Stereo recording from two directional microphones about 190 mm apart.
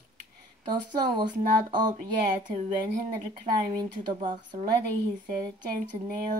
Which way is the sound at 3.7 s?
25° right (ahead or behind).